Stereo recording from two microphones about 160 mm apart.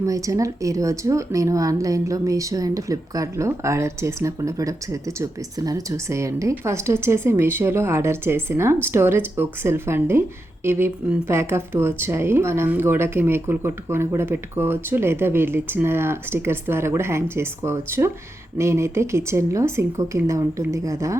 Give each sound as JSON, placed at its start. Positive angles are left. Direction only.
{"t": 0.0, "sound": "speech", "side_deg": -20}